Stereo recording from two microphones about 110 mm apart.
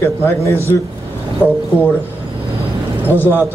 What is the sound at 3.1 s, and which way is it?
Speech, 20° left (ahead or behind).